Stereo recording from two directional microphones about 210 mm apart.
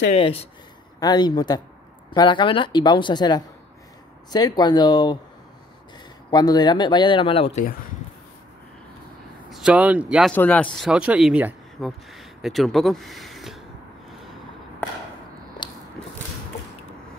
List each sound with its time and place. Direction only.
0.1 s a woman's voice: 30° left (ahead or behind)
6.3 s a woman's voice: 20° left (ahead or behind)
9.5 s speech: 5° right (ahead or behind)
10.3 s speech: 5° left (ahead or behind)